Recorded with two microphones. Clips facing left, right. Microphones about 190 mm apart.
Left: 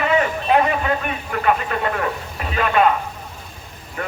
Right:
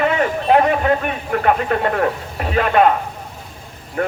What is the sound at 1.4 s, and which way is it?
Speech, 45° right (ahead or behind).